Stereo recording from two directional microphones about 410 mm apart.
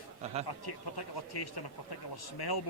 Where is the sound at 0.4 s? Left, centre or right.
Left.